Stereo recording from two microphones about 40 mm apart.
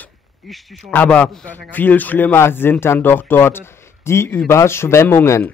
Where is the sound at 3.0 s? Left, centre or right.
Left.